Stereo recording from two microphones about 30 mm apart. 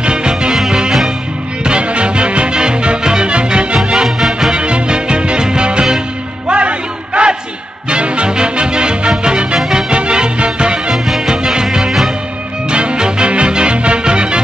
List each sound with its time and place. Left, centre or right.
0.0 s music: right
1.6 s music: right
6.5 s a sound: right
7.9 s music: right